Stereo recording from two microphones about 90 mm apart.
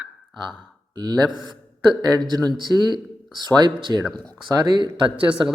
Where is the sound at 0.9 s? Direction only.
50° right (ahead or behind).